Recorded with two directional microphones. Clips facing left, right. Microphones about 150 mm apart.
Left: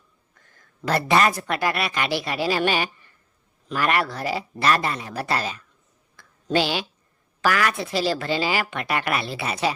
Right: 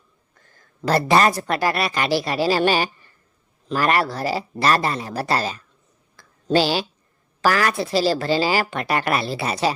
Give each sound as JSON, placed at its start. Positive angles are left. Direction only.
{"t": 0.4, "sound": "a woman's voice", "side_deg": -35}
{"t": 6.1, "sound": "a sound", "side_deg": -35}
{"t": 7.4, "sound": "a woman's voice", "side_deg": -35}